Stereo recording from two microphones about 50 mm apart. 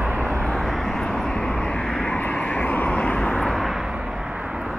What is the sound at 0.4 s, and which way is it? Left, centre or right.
Vehicle, centre.